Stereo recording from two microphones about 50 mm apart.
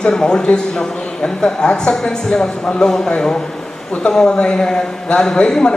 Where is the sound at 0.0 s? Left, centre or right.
Centre.